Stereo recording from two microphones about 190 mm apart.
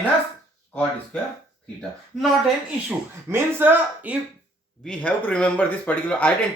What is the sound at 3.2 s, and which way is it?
Speech, 10° right (ahead or behind).